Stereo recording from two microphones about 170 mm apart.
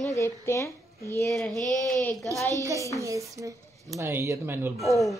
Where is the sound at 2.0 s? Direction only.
10° left (ahead or behind).